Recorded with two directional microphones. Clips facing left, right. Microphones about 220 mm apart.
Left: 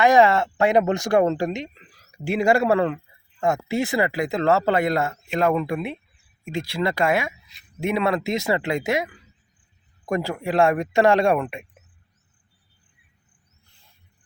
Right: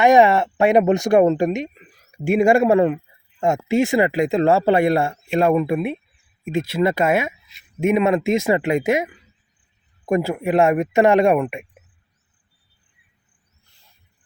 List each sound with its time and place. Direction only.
0.0 s speech: 20° right (ahead or behind)
5.1 s speech: 25° right (ahead or behind)